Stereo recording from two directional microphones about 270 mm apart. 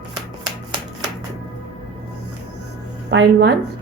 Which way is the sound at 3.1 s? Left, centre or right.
Right.